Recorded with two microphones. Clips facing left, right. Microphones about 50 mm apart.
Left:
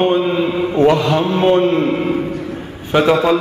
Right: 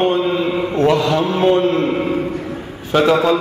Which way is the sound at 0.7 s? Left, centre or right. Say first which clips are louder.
Left 2 dB; centre.